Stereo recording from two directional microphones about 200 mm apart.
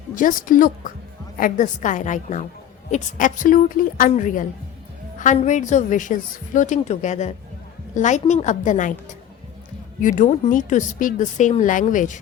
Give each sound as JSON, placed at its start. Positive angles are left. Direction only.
{"t": 0.2, "sound": "a woman's voice", "side_deg": 40}